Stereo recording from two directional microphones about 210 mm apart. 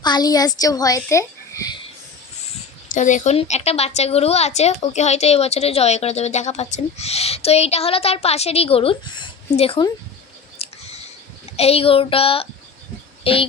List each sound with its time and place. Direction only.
0.0 s a child's voice: 20° left (ahead or behind)
2.9 s a woman's voice: 35° left (ahead or behind)
10.6 s a sound: 30° left (ahead or behind)
11.5 s a woman's voice: 30° left (ahead or behind)